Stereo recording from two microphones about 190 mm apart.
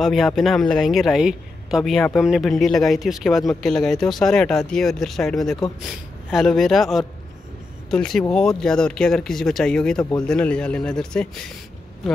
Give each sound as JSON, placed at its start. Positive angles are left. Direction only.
{"t": 0.0, "sound": "speech", "side_deg": 0}